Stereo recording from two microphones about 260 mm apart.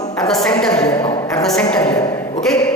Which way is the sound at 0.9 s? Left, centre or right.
Centre.